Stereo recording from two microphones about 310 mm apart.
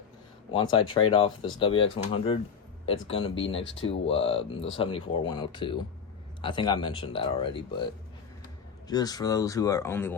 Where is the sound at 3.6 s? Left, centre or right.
Left.